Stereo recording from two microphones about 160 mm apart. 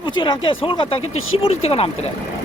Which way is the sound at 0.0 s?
30° left (ahead or behind).